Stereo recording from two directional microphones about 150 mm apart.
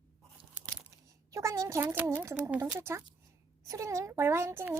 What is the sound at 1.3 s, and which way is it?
A child's voice, 20° right (ahead or behind).